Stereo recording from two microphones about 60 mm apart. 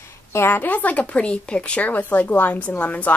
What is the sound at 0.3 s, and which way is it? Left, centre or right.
Speech, left.